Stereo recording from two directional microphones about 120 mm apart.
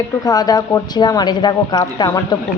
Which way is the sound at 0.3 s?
35° left (ahead or behind).